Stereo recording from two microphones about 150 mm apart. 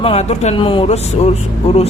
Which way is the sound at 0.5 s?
35° left (ahead or behind).